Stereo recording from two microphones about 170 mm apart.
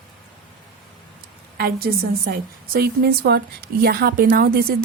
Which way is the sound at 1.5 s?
65° right (ahead or behind).